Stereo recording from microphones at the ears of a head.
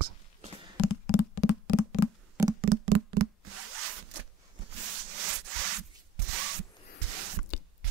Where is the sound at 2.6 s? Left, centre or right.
Right.